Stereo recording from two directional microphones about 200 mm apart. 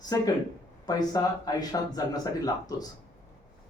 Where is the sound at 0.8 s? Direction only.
20° left (ahead or behind).